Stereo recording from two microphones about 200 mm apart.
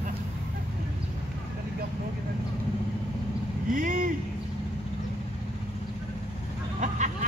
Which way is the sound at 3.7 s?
40° right (ahead or behind).